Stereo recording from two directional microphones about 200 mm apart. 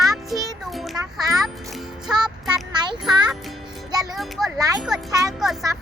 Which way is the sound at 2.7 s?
20° right (ahead or behind).